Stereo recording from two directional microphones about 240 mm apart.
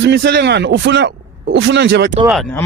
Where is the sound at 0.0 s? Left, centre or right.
Right.